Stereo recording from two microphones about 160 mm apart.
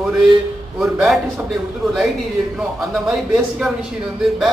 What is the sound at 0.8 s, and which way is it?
Speech, centre (ahead or behind).